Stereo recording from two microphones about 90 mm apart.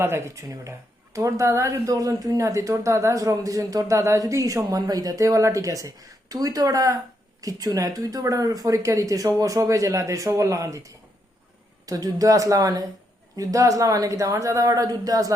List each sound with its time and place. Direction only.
0.0 s speech: 30° right (ahead or behind)